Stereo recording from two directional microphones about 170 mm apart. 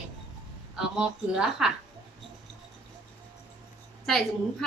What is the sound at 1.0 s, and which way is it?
Speech, 5° right (ahead or behind).